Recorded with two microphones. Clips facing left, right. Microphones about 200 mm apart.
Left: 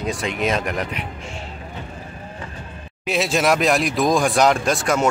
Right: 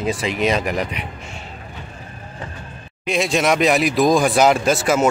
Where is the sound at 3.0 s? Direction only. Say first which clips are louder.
Right 1 dB; centre (ahead or behind).